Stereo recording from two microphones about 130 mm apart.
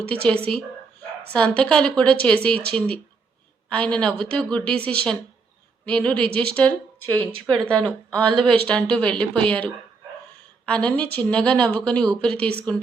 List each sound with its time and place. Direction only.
0.1 s speech: 10° left (ahead or behind)
8.3 s speech: 40° right (ahead or behind)
8.6 s speech: 10° left (ahead or behind)